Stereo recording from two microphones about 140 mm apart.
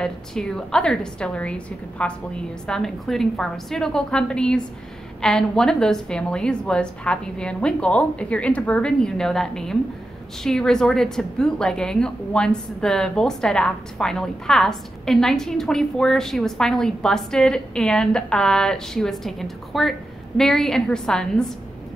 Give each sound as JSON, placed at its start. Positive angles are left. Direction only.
{"t": 0.0, "sound": "a woman's voice", "side_deg": 5}